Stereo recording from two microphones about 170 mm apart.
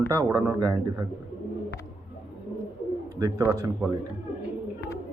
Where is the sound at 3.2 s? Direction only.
20° right (ahead or behind).